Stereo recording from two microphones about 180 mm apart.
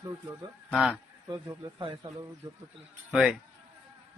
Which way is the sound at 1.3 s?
25° right (ahead or behind).